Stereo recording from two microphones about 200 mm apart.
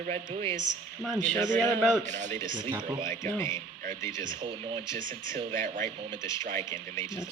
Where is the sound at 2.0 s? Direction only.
35° right (ahead or behind).